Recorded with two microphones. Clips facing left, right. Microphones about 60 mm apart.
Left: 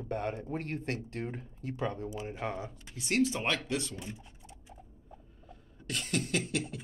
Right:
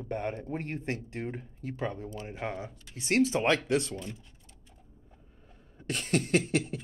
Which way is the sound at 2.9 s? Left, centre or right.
Right.